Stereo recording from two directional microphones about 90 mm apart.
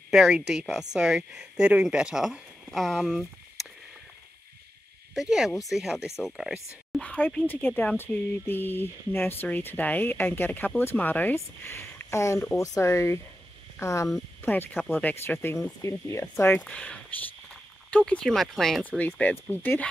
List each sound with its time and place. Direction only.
0.1 s speech: 5° right (ahead or behind)
3.1 s a sound: 5° right (ahead or behind)
5.1 s speech: 5° right (ahead or behind)
7.0 s speech: 15° left (ahead or behind); by 14.1 s 35° left (ahead or behind)
14.4 s speech: 20° left (ahead or behind); by 18.9 s 5° left (ahead or behind)
18.9 s speech: 15° left (ahead or behind)